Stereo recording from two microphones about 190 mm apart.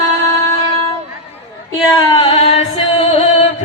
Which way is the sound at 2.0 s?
25° left (ahead or behind).